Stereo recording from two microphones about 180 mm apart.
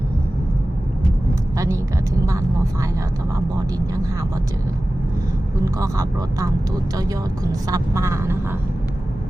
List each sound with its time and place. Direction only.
1.5 s vehicle: 15° right (ahead or behind)
5.8 s speech: 20° right (ahead or behind)
7.7 s speech: 15° right (ahead or behind)